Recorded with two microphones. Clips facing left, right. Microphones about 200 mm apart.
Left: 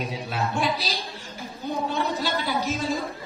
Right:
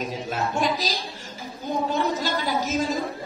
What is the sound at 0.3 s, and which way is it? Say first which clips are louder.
Speech: right 1 dB; 45° right (ahead or behind).